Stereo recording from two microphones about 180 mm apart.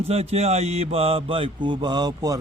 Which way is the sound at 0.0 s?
35° right (ahead or behind).